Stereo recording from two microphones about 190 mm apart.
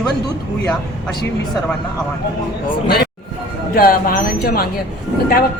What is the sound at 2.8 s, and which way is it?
Speech, 55° left (ahead or behind).